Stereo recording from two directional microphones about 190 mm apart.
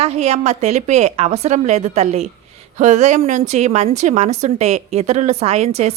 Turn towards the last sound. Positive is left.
turn(degrees=-35)  # may be behind; listen again after turning